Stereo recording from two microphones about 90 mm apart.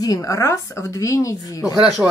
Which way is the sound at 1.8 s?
5° right (ahead or behind).